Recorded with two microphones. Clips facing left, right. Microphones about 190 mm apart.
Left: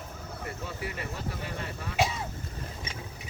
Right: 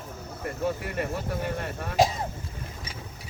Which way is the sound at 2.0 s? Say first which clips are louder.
Right 6 dB; 40° right (ahead or behind).